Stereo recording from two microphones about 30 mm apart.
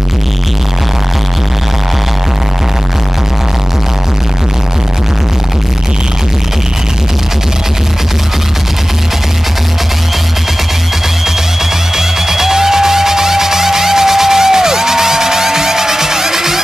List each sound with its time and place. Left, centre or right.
12.0 s music: centre